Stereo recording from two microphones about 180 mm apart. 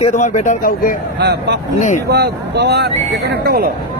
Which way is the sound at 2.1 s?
70° right (ahead or behind).